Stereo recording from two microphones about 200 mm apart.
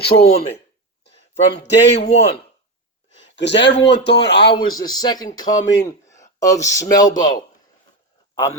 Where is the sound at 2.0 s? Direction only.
35° left (ahead or behind).